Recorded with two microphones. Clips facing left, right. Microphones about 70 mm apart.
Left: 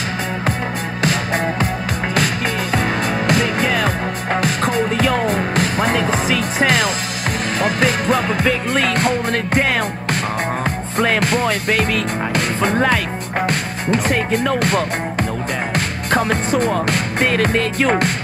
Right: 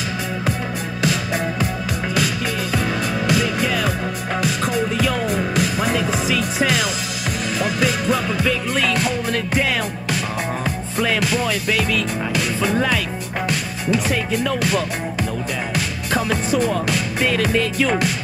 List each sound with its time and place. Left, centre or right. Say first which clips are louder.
1.0 s music: left 3 dB; left
2.7 s music: left 3 dB; left
11.0 s music: left 3 dB; left
16.1 s music: left 3 dB; left